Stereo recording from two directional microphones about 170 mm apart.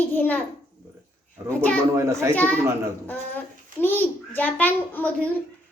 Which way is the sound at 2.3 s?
10° left (ahead or behind).